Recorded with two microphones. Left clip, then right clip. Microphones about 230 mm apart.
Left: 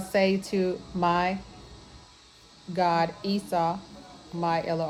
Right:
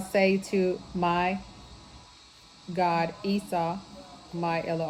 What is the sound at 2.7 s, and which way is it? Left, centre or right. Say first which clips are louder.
A woman's voice: left 2 dB; left.